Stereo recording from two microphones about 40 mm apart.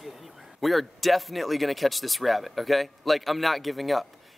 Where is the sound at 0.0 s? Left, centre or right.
Centre.